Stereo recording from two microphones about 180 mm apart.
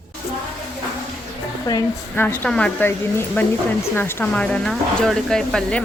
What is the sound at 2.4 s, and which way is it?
Speech, 5° left (ahead or behind).